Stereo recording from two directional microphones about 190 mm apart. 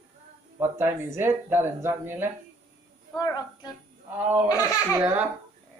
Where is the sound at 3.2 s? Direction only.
20° left (ahead or behind).